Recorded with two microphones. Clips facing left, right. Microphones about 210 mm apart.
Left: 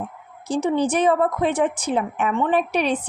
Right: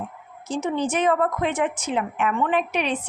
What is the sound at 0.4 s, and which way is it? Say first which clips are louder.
A woman's voice: left 4 dB; 35° left (ahead or behind).